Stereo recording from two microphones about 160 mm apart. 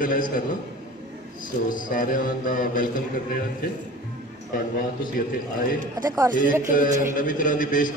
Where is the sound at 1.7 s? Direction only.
60° left (ahead or behind).